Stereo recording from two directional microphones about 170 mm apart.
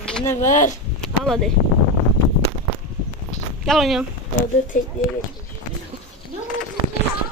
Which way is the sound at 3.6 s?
Centre (ahead or behind).